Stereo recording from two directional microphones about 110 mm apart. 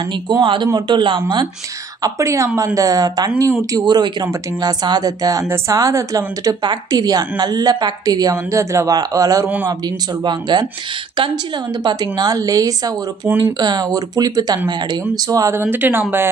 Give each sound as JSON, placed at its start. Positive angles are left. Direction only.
{"t": 0.1, "sound": "a man's voice", "side_deg": -45}
{"t": 2.0, "sound": "a woman's voice", "side_deg": -30}
{"t": 11.8, "sound": "a woman's voice", "side_deg": -40}